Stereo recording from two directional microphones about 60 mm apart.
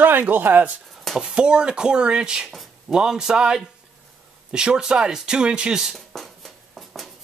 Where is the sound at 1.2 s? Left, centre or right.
Centre.